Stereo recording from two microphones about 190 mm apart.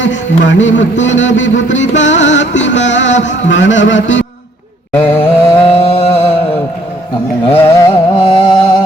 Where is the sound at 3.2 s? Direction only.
75° left (ahead or behind).